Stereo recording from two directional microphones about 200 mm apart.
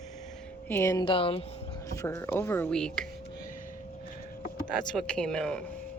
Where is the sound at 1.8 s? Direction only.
15° left (ahead or behind).